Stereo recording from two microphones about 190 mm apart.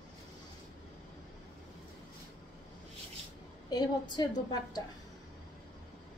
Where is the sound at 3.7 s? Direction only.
20° left (ahead or behind).